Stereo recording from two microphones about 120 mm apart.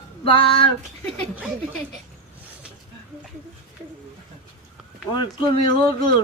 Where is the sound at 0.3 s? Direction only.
50° left (ahead or behind).